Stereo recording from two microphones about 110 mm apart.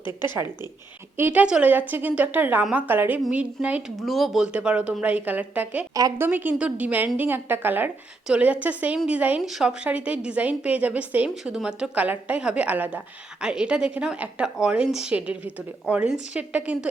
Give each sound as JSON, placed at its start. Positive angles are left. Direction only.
{"t": 0.1, "sound": "a woman's voice", "side_deg": -20}
{"t": 3.9, "sound": "a woman's voice", "side_deg": 0}
{"t": 5.9, "sound": "a woman's voice", "side_deg": -35}
{"t": 6.1, "sound": "a woman's voice", "side_deg": -20}